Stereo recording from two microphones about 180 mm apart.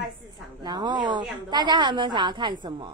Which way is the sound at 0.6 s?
25° right (ahead or behind).